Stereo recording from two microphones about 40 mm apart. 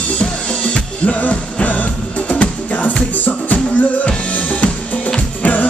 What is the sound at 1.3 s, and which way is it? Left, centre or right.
Music, left.